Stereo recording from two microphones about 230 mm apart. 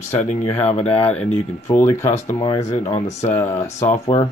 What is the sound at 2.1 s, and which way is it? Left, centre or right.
Speech, left.